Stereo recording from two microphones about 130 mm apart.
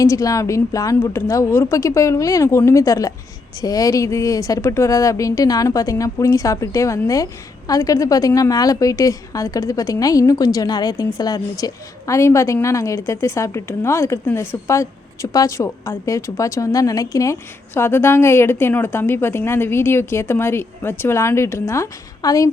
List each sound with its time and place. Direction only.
0.0 s a woman's voice: 25° left (ahead or behind)